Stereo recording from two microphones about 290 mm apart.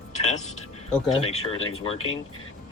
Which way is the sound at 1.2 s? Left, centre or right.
Centre.